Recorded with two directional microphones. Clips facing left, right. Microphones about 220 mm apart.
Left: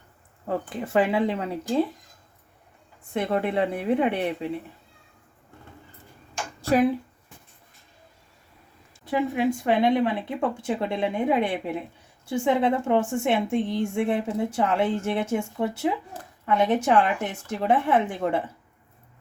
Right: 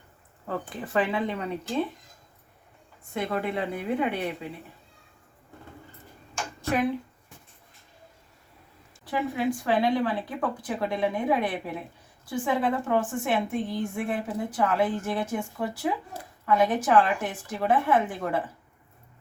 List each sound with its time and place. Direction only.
0.4 s a woman's voice: 25° left (ahead or behind)
3.2 s a woman's voice: 30° left (ahead or behind)
6.6 s a sound: 30° left (ahead or behind)
9.0 s a woman's voice: 20° left (ahead or behind)